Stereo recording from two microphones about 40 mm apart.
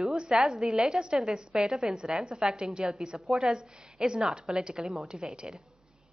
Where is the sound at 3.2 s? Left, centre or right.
Centre.